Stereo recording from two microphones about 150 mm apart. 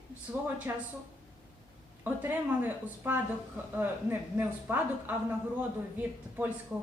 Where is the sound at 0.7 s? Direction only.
15° right (ahead or behind).